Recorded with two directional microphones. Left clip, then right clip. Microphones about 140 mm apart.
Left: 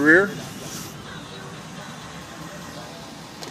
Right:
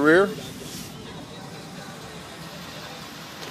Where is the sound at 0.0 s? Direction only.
25° right (ahead or behind).